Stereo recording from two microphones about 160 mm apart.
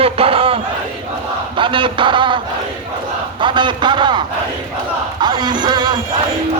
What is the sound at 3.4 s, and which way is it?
Speech, 30° right (ahead or behind).